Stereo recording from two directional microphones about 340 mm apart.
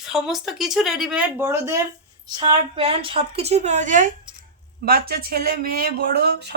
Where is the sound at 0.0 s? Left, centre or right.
Centre.